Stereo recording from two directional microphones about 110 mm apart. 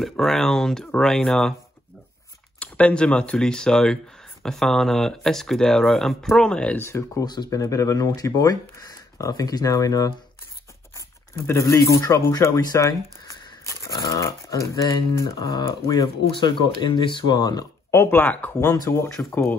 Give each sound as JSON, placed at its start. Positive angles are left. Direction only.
{"t": 0.0, "sound": "speech", "side_deg": 5}
{"t": 2.6, "sound": "speech", "side_deg": 10}
{"t": 6.8, "sound": "speech", "side_deg": 25}
{"t": 7.2, "sound": "speech", "side_deg": 35}
{"t": 17.9, "sound": "speech", "side_deg": 20}
{"t": 18.6, "sound": "speech", "side_deg": 30}